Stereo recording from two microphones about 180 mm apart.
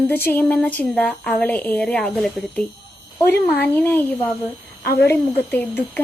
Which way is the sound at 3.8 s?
10° left (ahead or behind).